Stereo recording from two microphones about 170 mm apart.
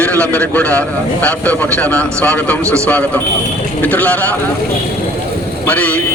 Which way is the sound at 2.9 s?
10° left (ahead or behind).